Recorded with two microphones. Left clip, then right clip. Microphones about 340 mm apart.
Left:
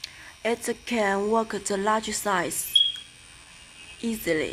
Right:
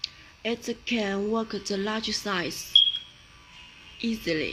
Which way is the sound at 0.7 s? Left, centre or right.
Left.